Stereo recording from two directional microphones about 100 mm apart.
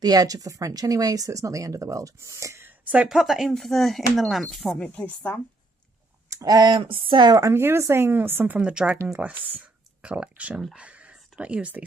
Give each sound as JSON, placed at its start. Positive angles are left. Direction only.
{"t": 0.0, "sound": "speech", "side_deg": -40}
{"t": 2.8, "sound": "speech", "side_deg": -15}
{"t": 3.1, "sound": "speech", "side_deg": -5}
{"t": 4.7, "sound": "speech", "side_deg": 15}
{"t": 6.3, "sound": "speech", "side_deg": -40}
{"t": 6.8, "sound": "speech", "side_deg": -65}
{"t": 7.2, "sound": "speech", "side_deg": -35}
{"t": 7.5, "sound": "speech", "side_deg": -25}